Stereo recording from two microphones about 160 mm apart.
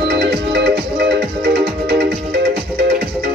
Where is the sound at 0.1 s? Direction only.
90° right.